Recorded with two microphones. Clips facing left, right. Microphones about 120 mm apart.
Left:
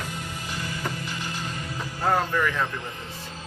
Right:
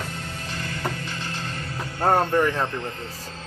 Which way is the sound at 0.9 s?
15° left (ahead or behind).